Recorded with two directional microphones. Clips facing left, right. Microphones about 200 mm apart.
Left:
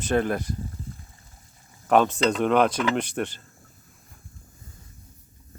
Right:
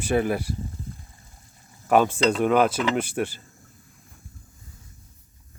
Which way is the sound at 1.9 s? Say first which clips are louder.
Right 1 dB; 5° right (ahead or behind).